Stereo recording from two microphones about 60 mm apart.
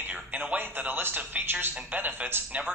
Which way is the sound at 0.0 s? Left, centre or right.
Right.